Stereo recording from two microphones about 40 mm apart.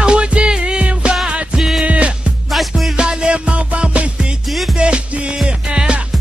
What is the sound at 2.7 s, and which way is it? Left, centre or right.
Music, centre.